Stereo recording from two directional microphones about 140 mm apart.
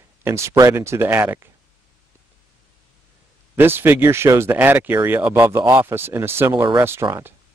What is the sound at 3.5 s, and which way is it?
Speech, 15° right (ahead or behind).